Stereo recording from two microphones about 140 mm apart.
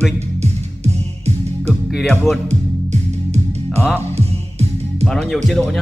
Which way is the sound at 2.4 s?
55° right (ahead or behind).